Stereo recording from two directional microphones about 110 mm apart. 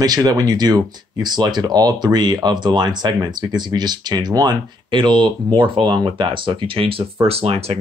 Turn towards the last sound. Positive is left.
turn(degrees=-65)  # may be behind; listen again after turning